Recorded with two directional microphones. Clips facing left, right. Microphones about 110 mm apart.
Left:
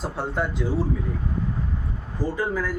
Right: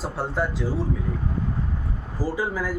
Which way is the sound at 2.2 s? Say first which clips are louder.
Left 1 dB; 10° right (ahead or behind).